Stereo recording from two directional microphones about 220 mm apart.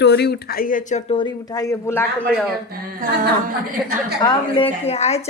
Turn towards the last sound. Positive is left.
turn(degrees=30)  # may be behind; listen again after turning